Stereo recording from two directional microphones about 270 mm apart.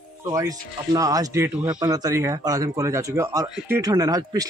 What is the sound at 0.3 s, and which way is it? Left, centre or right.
Speech, centre.